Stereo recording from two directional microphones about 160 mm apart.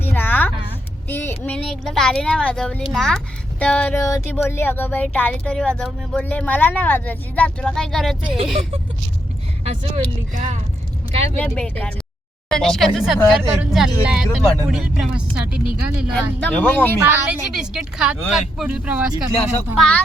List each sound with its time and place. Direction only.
0.0 s a sound: 15° left (ahead or behind)
1.0 s speech: 15° left (ahead or behind)
9.6 s speech: 45° right (ahead or behind)
11.4 s speech: 5° left (ahead or behind)
16.1 s speech: 10° left (ahead or behind)
17.1 s speech: 5° right (ahead or behind)